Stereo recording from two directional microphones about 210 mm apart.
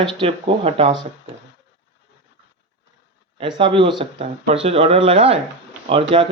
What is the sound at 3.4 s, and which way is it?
Speech, 25° right (ahead or behind).